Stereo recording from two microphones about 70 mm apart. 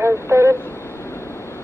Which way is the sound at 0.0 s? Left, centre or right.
Right.